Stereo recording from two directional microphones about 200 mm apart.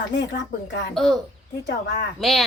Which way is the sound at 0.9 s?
Centre (ahead or behind).